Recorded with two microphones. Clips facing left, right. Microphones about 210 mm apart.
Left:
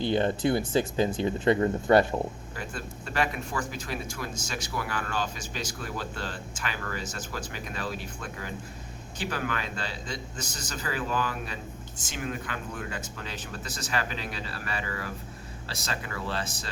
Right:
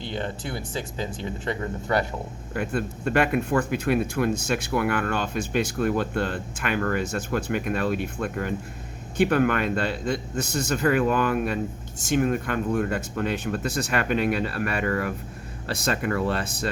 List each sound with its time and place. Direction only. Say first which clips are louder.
0.4 s speech: left 7 dB; 55° left (ahead or behind)
1.5 s speech: left 6 dB; 25° left (ahead or behind)
2.6 s speech: right 12 dB; 60° right (ahead or behind)